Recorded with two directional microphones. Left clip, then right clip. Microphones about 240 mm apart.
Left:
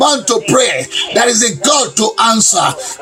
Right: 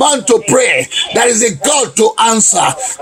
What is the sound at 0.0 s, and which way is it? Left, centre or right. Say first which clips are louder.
Music: right 1 dB; right.